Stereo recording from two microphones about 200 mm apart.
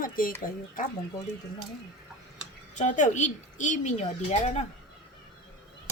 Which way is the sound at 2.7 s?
40° left (ahead or behind).